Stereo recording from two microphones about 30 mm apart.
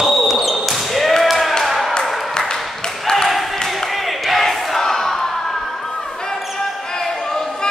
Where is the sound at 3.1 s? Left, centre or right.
Centre.